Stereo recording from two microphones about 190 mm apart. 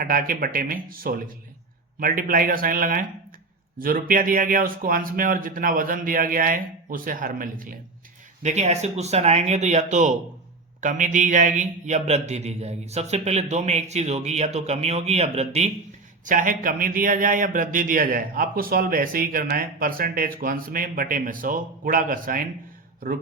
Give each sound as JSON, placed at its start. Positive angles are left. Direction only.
{"t": 0.0, "sound": "a man's voice", "side_deg": -45}